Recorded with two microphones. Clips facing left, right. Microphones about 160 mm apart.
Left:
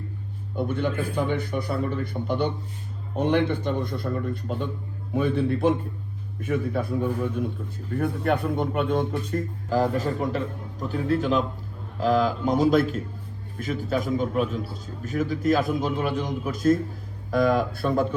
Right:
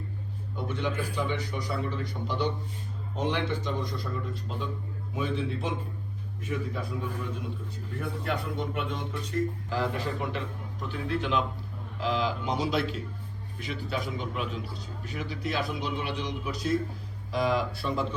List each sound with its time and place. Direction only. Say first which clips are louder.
0.5 s a man's voice: left 6 dB; 55° left (ahead or behind)